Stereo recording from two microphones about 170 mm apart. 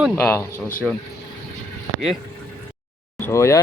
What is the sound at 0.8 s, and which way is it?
Speech, centre (ahead or behind).